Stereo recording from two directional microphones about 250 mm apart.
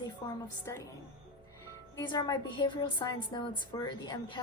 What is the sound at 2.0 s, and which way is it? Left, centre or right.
A woman's voice, centre.